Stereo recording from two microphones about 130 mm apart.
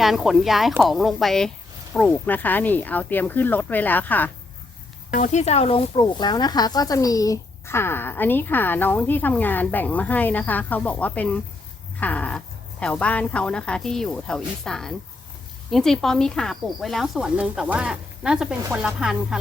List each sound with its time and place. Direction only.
0.0 s speech: centre (ahead or behind); by 4.3 s 15° left (ahead or behind)
5.1 s speech: 65° left (ahead or behind); by 11.3 s 10° left (ahead or behind)
11.9 s dog: 10° left (ahead or behind)
12.8 s speech: 10° left (ahead or behind)